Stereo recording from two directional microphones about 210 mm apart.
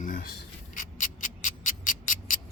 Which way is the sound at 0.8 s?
40° left (ahead or behind).